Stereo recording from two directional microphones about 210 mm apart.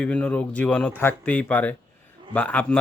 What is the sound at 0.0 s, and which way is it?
Speech, 5° left (ahead or behind).